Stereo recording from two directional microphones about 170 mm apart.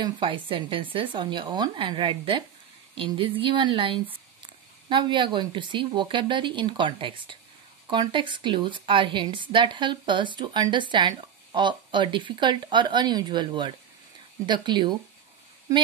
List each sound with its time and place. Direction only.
0.0 s speech: 30° right (ahead or behind)